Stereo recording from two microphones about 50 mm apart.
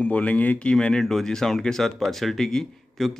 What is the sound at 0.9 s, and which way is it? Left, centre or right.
Speech, centre.